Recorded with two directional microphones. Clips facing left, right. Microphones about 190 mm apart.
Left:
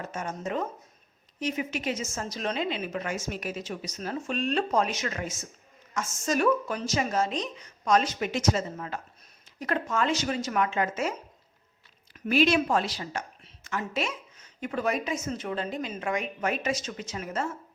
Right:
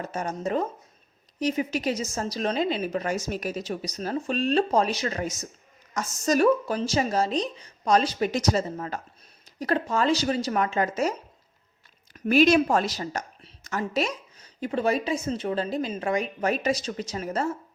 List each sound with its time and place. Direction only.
0.0 s a woman's voice: 35° right (ahead or behind)
12.1 s a woman's voice: 45° right (ahead or behind)